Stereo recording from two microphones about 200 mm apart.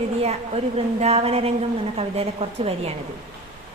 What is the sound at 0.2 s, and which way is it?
A woman's voice, 30° right (ahead or behind).